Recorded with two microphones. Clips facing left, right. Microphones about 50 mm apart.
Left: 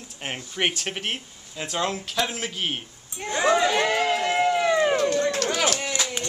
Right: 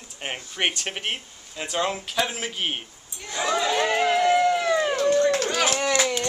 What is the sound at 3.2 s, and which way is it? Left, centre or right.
Speech, left.